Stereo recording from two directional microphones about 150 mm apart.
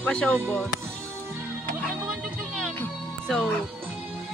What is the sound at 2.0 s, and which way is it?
Music, centre (ahead or behind).